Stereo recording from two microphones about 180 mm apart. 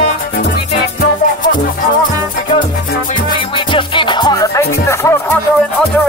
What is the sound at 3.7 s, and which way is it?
Music, 25° left (ahead or behind).